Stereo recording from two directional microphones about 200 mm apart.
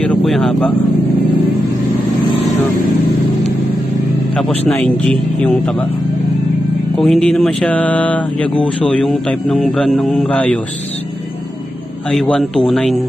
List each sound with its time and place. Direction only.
0.0 s speech: 5° left (ahead or behind)
4.4 s speech: 5° left (ahead or behind)
7.0 s speech: centre (ahead or behind)
12.1 s speech: centre (ahead or behind)